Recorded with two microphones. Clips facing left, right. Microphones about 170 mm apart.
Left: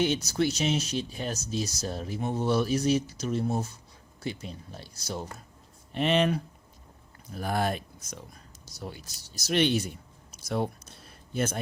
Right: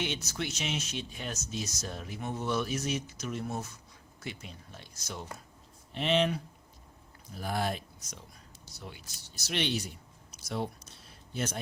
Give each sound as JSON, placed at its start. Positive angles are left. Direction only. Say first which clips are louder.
{"t": 0.0, "sound": "speech", "louder": "left 9 dB", "side_deg": 40}
{"t": 5.9, "sound": "speech", "louder": "left 3 dB", "side_deg": 55}
{"t": 8.6, "sound": "speech", "louder": "left 7 dB", "side_deg": 40}